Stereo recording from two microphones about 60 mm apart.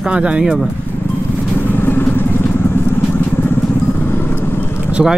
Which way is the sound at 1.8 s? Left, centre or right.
Left.